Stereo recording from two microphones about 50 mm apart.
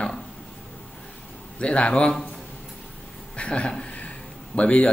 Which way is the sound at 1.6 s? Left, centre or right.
Left.